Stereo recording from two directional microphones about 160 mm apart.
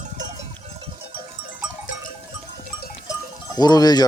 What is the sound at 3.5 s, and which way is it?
Speech, 25° left (ahead or behind).